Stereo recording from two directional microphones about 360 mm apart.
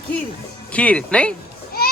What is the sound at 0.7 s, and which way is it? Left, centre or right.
Speech, centre.